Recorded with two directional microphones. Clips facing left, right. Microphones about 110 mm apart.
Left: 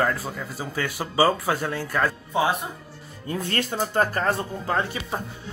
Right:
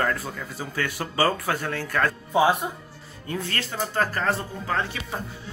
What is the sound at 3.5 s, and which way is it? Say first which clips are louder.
Speech: left 5 dB; 20° left (ahead or behind).